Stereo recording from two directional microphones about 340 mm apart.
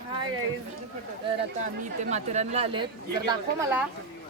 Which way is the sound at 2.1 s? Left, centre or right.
Centre.